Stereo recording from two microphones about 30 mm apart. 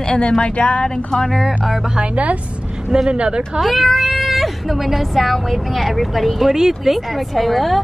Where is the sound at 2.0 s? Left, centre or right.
Right.